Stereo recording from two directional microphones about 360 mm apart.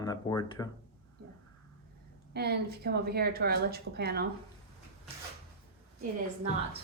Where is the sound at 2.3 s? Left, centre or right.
Right.